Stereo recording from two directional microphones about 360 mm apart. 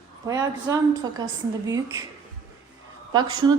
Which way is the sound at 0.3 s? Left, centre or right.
Centre.